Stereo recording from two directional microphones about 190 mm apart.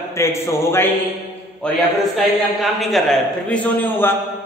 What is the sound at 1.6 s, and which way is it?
A man's voice, centre (ahead or behind).